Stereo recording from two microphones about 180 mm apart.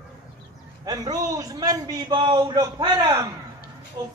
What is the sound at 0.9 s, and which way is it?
A man's voice, 20° right (ahead or behind).